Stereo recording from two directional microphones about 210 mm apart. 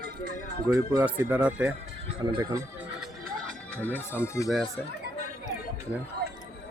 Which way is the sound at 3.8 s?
10° left (ahead or behind).